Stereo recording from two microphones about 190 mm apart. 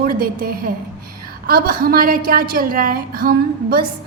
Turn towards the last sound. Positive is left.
turn(degrees=-50)  # may be behind; listen again after turning